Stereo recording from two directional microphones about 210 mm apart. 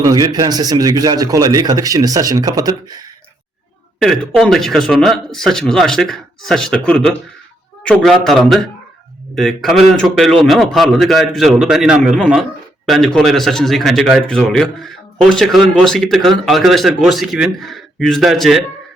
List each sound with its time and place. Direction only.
0.0 s speech: 20° right (ahead or behind)
4.4 s speech: centre (ahead or behind)